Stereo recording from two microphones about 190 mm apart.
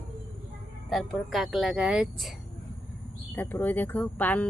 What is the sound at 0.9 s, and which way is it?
Speech, centre (ahead or behind).